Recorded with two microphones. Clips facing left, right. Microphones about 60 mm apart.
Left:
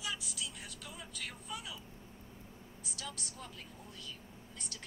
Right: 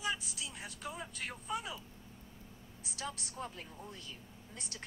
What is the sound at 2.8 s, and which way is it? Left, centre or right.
A woman's voice, right.